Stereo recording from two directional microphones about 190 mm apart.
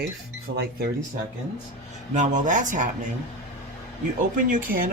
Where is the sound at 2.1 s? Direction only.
40° right (ahead or behind).